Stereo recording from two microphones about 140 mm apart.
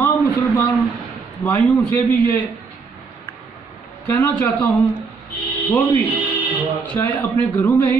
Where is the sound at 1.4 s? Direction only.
15° left (ahead or behind).